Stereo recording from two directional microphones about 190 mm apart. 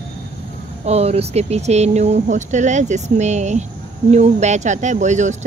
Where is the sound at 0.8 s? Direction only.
35° right (ahead or behind).